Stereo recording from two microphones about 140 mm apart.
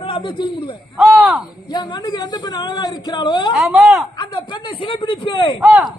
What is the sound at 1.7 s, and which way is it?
Speech, 30° left (ahead or behind).